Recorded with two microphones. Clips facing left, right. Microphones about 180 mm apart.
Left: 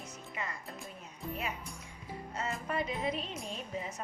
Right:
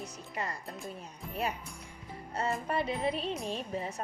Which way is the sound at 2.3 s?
30° right (ahead or behind).